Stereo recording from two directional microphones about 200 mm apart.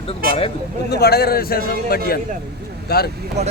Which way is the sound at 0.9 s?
50° left (ahead or behind).